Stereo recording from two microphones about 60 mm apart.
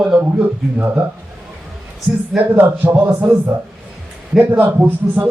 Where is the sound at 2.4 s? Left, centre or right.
Right.